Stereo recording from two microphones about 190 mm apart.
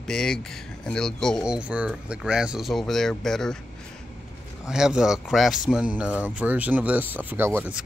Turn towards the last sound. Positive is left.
turn(degrees=-10)  # may be behind; listen again after turning